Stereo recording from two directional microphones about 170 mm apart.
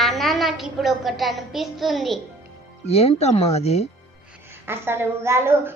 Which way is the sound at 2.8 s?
35° left (ahead or behind).